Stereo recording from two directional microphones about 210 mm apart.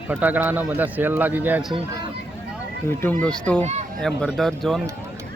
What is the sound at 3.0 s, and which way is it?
Speech, 5° left (ahead or behind).